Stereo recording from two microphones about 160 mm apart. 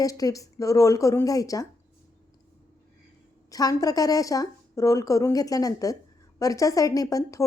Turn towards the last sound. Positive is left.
turn(degrees=20)  # may be behind; listen again after turning